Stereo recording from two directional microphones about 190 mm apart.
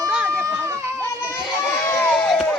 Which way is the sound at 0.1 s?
5° right (ahead or behind).